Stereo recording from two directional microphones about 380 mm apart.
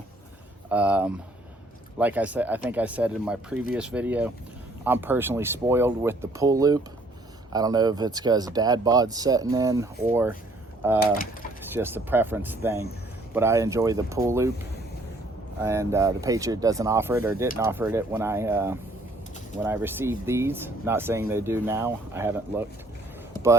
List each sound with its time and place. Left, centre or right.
0.7 s speech: centre
11.7 s speech: centre
15.6 s speech: centre